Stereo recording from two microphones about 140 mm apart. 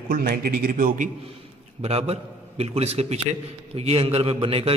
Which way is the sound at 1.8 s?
45° right (ahead or behind).